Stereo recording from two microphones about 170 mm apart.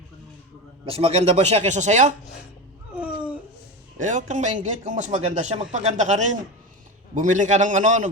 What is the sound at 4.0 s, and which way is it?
A man's voice, 45° right (ahead or behind).